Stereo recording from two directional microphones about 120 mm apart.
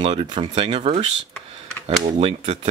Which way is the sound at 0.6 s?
55° right (ahead or behind).